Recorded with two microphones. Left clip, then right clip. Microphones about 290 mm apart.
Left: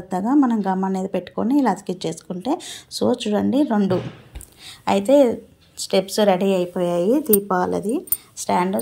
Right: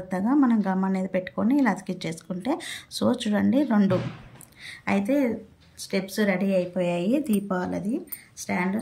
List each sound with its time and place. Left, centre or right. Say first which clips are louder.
0.1 s a woman's voice: left 4 dB; centre
7.2 s speech: left 10 dB; right
7.7 s a woman's voice: left 7 dB; centre